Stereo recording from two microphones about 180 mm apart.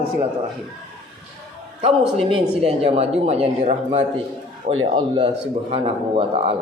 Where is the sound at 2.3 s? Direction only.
35° right (ahead or behind).